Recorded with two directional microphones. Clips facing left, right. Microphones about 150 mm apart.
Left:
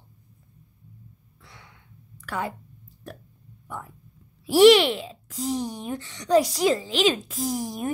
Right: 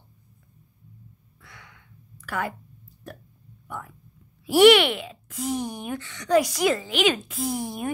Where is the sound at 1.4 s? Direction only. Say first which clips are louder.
Right 1 dB; 25° left (ahead or behind).